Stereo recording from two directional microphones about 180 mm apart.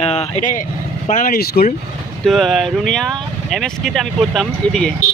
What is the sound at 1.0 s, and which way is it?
Speech, 50° left (ahead or behind).